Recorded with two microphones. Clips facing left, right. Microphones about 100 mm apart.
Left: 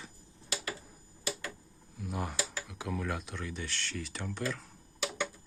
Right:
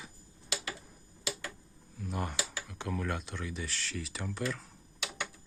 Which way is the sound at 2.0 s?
Centre (ahead or behind).